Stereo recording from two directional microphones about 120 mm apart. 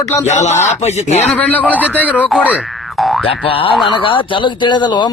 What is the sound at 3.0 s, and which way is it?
Boing, centre (ahead or behind).